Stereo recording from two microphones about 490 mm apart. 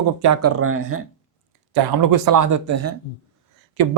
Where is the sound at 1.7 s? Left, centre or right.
Right.